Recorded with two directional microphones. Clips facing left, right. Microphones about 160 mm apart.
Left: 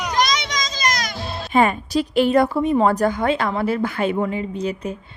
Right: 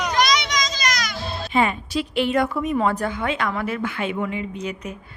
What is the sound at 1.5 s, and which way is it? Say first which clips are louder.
Speech: left 4 dB; 45° left (ahead or behind).